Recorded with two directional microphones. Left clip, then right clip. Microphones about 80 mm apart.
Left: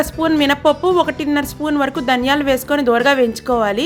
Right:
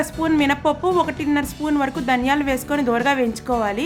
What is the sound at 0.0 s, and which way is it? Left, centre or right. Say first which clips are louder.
A woman's voice: left 4 dB; left.